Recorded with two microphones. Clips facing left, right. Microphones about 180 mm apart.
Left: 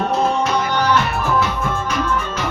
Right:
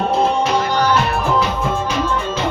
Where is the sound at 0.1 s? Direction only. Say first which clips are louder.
Right 3 dB; 30° right (ahead or behind).